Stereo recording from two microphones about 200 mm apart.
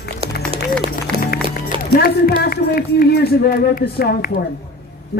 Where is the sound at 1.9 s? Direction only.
50° left (ahead or behind).